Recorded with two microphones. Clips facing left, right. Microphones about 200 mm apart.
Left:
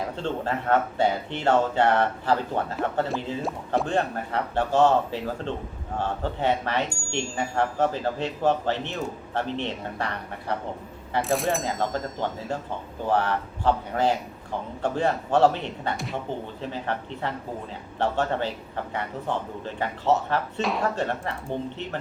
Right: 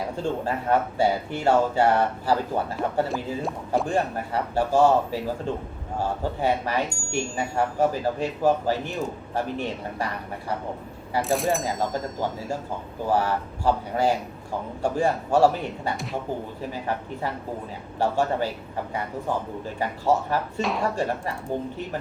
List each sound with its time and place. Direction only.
0.2 s speech: 10° right (ahead or behind)
11.1 s speech: centre (ahead or behind)
13.1 s speech: 10° right (ahead or behind)